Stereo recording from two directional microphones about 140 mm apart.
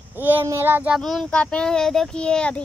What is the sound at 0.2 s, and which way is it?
Speech, 15° right (ahead or behind).